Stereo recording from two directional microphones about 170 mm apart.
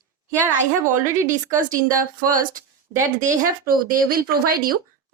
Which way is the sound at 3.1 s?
50° right (ahead or behind).